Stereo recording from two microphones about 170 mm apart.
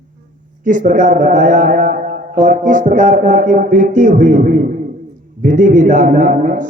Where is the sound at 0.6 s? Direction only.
50° right (ahead or behind).